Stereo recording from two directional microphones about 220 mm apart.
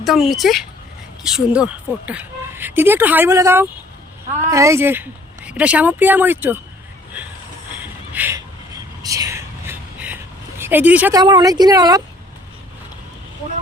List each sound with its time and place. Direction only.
0.0 s speech: centre (ahead or behind)
7.1 s train: 5° right (ahead or behind)
7.8 s a sound: 10° right (ahead or behind)
10.6 s speech: 10° right (ahead or behind)